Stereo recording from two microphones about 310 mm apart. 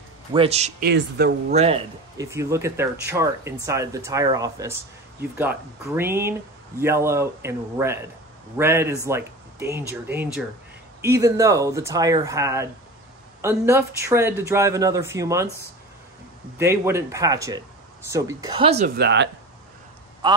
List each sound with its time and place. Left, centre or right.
0.3 s speech: centre
1.5 s speech: centre
16.5 s speech: centre
18.9 s speech: right
20.2 s a man's voice: centre